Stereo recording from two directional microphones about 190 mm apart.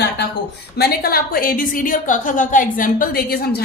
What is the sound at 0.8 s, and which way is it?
A woman's voice, 55° left (ahead or behind).